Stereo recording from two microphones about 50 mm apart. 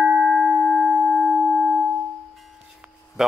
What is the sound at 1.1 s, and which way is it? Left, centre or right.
Singing bowl, centre.